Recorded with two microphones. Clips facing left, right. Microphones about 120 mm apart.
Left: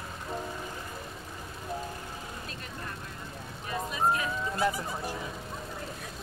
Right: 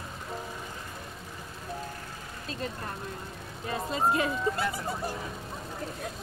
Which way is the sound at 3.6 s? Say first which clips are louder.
Right 3 dB; 30° right (ahead or behind).